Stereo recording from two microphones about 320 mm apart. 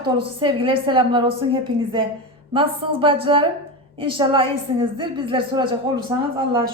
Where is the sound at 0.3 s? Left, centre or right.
Centre.